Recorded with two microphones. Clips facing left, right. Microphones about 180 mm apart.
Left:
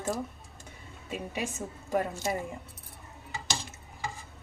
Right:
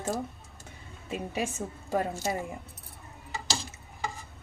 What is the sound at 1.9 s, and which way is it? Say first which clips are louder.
Speech: even; 25° right (ahead or behind).